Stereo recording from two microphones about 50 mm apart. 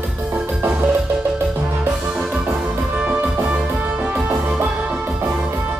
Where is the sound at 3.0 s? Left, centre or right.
Right.